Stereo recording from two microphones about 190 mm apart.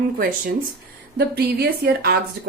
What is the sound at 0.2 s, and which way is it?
A woman's voice, 45° right (ahead or behind).